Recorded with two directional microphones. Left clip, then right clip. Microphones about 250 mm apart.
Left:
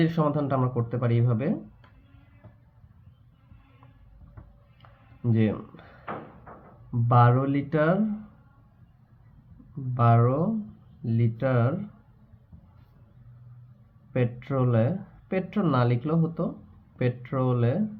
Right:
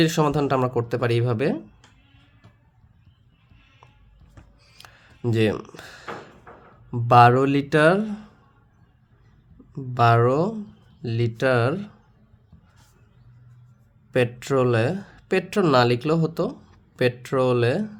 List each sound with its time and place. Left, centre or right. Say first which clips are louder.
0.0 s speech: right 5 dB; right
4.8 s a sound: right 7 dB; right
7.1 s speech: right 8 dB; right
9.9 s speech: right 6 dB; right
14.1 s speech: right 7 dB; right